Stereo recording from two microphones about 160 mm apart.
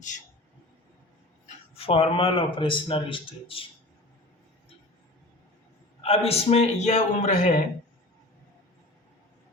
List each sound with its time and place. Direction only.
1.5 s speech: 40° left (ahead or behind)
6.0 s a man's voice: 40° left (ahead or behind)